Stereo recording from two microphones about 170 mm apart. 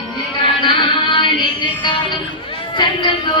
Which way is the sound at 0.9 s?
30° left (ahead or behind).